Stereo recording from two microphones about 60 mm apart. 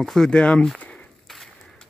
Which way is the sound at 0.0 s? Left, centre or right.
Centre.